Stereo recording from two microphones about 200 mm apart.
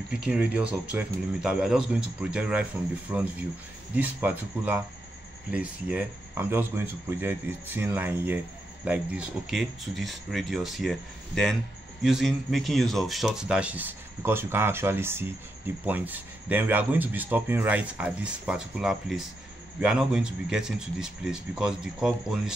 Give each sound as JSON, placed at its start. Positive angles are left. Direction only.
{"t": 0.1, "sound": "speech", "side_deg": -5}